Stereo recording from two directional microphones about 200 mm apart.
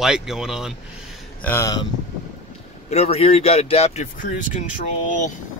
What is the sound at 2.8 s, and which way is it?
Speech, 30° left (ahead or behind).